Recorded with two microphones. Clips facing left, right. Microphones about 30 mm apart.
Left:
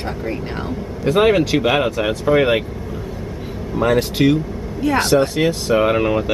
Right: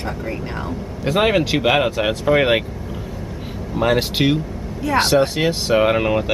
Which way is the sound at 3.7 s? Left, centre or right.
Right.